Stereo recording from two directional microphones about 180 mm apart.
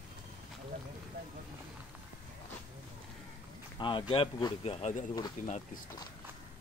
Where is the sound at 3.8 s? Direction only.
25° left (ahead or behind).